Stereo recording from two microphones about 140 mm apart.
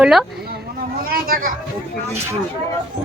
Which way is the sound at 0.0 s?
Centre (ahead or behind).